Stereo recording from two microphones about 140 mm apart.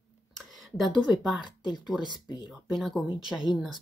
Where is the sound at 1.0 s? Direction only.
5° right (ahead or behind).